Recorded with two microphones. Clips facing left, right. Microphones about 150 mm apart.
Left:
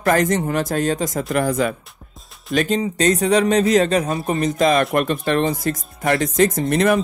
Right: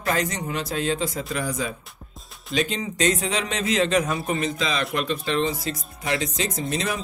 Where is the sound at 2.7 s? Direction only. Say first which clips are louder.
Left 6 dB; 35° left (ahead or behind).